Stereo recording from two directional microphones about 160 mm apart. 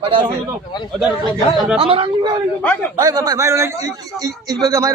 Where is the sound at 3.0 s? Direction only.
25° right (ahead or behind).